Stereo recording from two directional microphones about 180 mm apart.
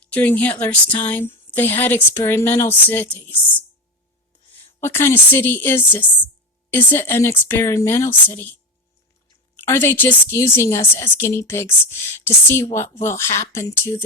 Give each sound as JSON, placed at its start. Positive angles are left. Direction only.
{"t": 0.0, "sound": "a woman's voice", "side_deg": 10}
{"t": 4.8, "sound": "a woman's voice", "side_deg": 15}
{"t": 9.6, "sound": "a woman's voice", "side_deg": 15}